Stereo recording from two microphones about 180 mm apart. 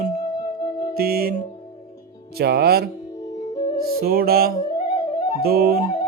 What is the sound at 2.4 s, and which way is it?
Music, 60° right (ahead or behind).